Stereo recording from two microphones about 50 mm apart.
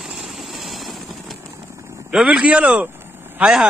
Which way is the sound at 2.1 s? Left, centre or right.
Centre.